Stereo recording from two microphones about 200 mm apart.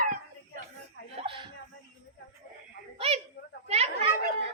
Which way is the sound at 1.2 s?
25° right (ahead or behind).